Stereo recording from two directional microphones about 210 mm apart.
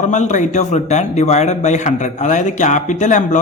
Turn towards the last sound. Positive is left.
turn(degrees=35)  # may be behind; listen again after turning